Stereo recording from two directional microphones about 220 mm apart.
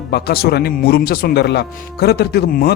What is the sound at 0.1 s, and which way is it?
A man's voice, 45° left (ahead or behind).